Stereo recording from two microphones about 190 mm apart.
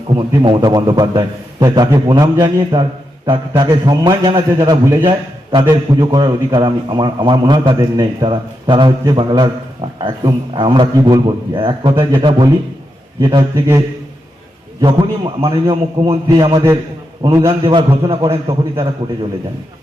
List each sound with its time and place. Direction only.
0.2 s a man's voice: 25° right (ahead or behind)